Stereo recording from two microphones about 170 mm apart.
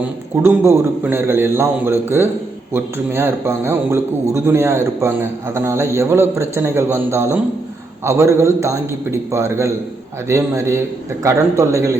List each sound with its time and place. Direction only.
0.4 s a man's voice: 15° right (ahead or behind)